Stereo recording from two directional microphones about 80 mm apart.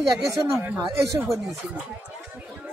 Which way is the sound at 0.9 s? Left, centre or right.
Right.